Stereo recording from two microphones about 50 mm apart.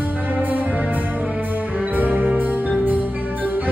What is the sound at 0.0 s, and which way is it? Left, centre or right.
Music, right.